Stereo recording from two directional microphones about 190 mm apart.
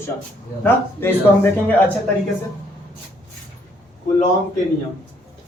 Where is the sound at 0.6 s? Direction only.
10° left (ahead or behind).